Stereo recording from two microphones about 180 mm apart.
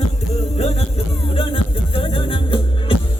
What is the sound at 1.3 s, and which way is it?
Music, 30° left (ahead or behind).